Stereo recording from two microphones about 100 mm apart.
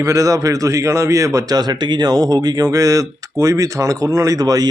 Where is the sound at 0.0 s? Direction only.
35° right (ahead or behind).